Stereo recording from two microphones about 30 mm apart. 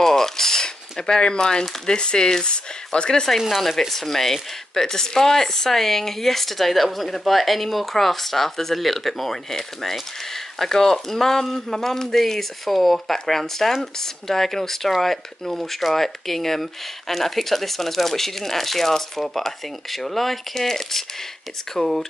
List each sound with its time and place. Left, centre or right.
0.0 s a sound: centre
1.9 s speech: left
3.3 s speech: centre
3.9 s speech: centre
21.7 s speech: centre